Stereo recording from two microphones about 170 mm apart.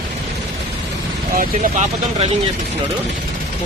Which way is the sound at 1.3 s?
50° right (ahead or behind).